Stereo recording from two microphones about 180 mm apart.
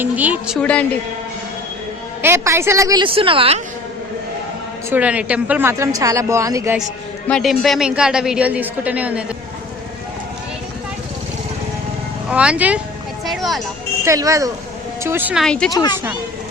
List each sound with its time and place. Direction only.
0.0 s speech: 10° right (ahead or behind)
0.6 s a man's voice: 5° left (ahead or behind)
2.2 s a woman's voice: 15° right (ahead or behind); by 3.6 s 30° right (ahead or behind)
4.9 s speech: 10° right (ahead or behind)
7.3 s a woman's voice: centre (ahead or behind)
12.3 s speech: 5° right (ahead or behind)
14.0 s speech: 15° right (ahead or behind)
15.7 s speech: 20° left (ahead or behind)